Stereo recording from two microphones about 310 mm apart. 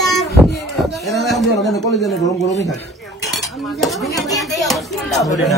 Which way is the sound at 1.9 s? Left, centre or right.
Centre.